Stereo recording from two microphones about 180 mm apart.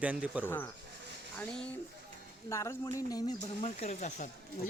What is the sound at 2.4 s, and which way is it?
Speech, 15° left (ahead or behind).